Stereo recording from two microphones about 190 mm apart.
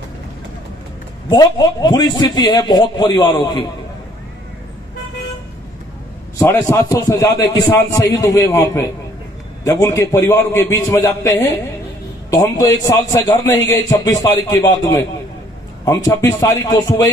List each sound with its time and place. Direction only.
1.3 s a man's voice: 20° left (ahead or behind)
6.3 s a man's voice: 15° left (ahead or behind)